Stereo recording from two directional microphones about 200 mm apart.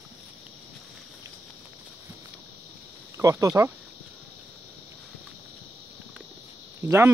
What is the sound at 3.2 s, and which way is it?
Speech, 15° right (ahead or behind).